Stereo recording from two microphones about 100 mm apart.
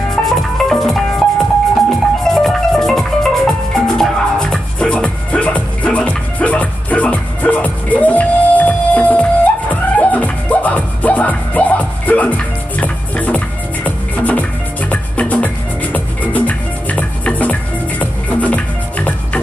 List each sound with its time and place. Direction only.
0.1 s music: 5° left (ahead or behind)